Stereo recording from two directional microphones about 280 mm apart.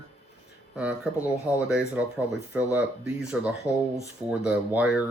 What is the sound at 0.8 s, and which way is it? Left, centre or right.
Speech, centre.